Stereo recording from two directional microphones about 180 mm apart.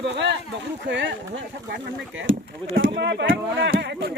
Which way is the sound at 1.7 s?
90° right.